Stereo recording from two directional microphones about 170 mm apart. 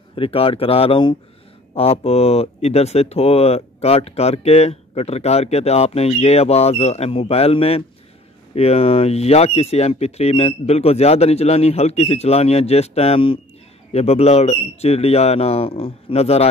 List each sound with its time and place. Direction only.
0.1 s speech: 35° left (ahead or behind)